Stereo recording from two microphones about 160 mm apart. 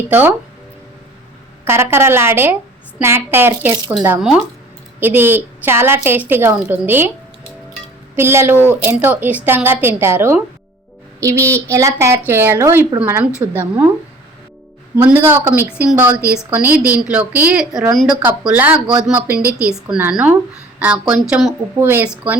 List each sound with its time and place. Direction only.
0.1 s a woman's voice: 10° right (ahead or behind)
1.6 s a woman's voice: 15° right (ahead or behind)
8.1 s a woman's voice: 15° right (ahead or behind)
14.9 s a woman's voice: 10° right (ahead or behind)